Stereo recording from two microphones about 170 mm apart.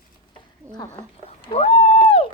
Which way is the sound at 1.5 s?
35° left (ahead or behind).